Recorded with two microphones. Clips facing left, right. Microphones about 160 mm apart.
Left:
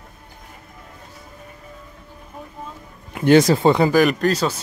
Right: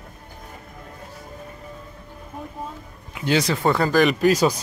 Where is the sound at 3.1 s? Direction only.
50° left (ahead or behind).